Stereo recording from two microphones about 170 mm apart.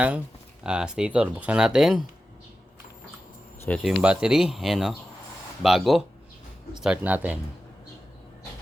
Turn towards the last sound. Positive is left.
turn(degrees=-10)  # may be behind; listen again after turning